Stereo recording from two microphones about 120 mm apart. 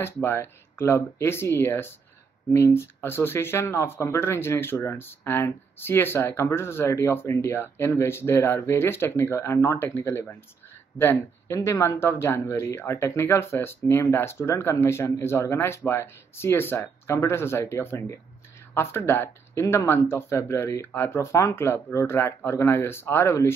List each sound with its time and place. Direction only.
0.0 s speech: 20° left (ahead or behind)